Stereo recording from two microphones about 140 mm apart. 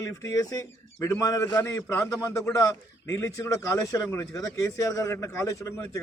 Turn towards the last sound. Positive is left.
turn(degrees=20)  # may be behind; listen again after turning